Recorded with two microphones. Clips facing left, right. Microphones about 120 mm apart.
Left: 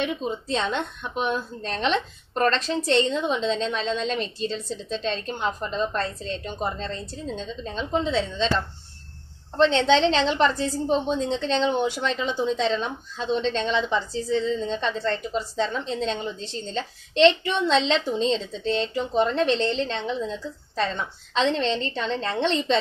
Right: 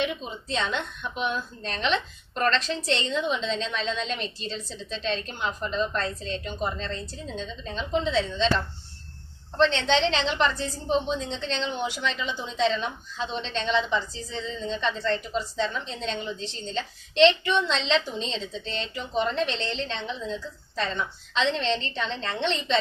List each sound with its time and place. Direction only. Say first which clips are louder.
0.0 s a woman's voice: left 3 dB; 45° left (ahead or behind)
9.9 s a woman's voice: left 4 dB; 45° left (ahead or behind)